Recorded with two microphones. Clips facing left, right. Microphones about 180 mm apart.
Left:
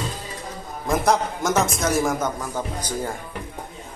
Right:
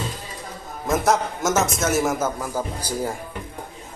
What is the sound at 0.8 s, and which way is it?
A man's voice, centre (ahead or behind).